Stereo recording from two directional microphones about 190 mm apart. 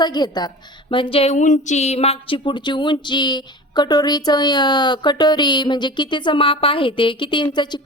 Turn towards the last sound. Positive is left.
turn(degrees=25)  # may be behind; listen again after turning